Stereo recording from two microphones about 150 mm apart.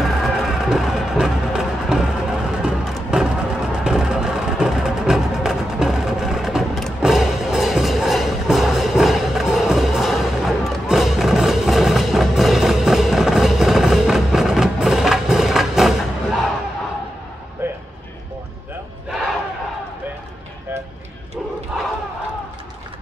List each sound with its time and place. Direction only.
0.0 s music: centre (ahead or behind)
17.6 s music: 15° right (ahead or behind)
21.7 s battle cry: centre (ahead or behind)